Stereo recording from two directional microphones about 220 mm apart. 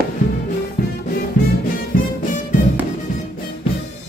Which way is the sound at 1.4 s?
40° left (ahead or behind).